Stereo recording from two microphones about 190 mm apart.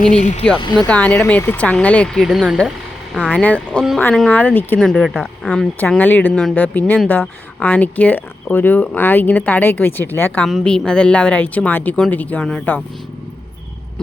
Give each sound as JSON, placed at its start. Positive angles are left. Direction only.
{"t": 0.1, "sound": "speech", "side_deg": 40}
{"t": 0.6, "sound": "speech", "side_deg": 20}
{"t": 0.9, "sound": "speech", "side_deg": 5}